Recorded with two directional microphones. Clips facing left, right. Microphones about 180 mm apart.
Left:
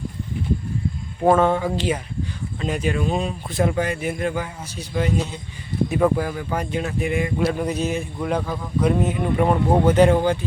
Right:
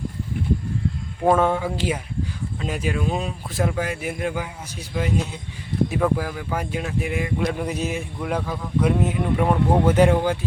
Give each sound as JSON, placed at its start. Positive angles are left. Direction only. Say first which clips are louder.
{"t": 1.4, "sound": "speech", "louder": "left 2 dB", "side_deg": -5}
{"t": 9.8, "sound": "speech", "louder": "left 2 dB", "side_deg": -10}